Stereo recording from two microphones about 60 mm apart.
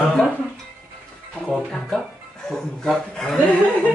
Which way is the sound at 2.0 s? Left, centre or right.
Centre.